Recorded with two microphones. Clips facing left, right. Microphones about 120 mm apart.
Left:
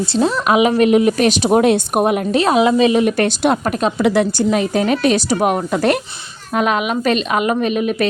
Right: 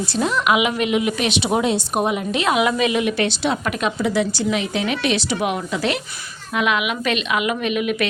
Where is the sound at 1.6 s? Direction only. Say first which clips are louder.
Left 6 dB; 55° left (ahead or behind).